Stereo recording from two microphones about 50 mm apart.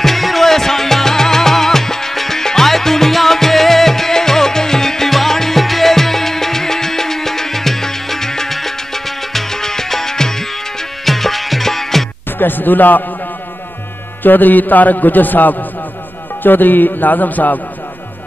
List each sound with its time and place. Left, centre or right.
0.0 s music: centre
12.4 s a man's voice: left
14.2 s a man's voice: left